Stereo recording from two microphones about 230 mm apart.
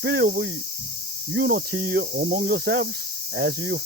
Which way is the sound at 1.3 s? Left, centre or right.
Right.